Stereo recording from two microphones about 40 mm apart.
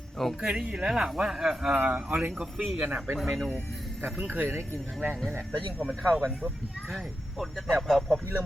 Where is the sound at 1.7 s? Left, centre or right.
Right.